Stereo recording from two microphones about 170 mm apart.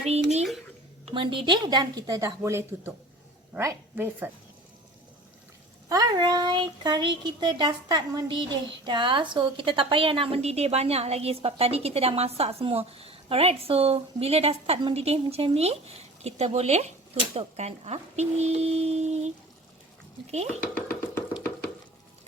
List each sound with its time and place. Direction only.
0.1 s a woman's voice: 40° right (ahead or behind); by 4.3 s 10° right (ahead or behind)
5.9 s a woman's voice: 25° right (ahead or behind); by 19.3 s 40° right (ahead or behind)
20.3 s a woman's voice: 40° right (ahead or behind)
20.7 s a sound: 10° left (ahead or behind)